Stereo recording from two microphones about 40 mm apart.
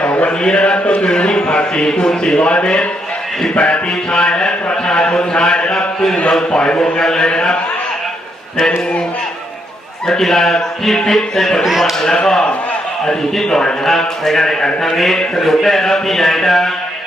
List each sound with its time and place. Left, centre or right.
0.0 s mantra: left
0.4 s a man's voice: left
5.7 s a sound: centre
6.5 s a man's voice: left
10.1 s speech: centre
11.6 s a man's voice: centre
12.2 s a man's voice: centre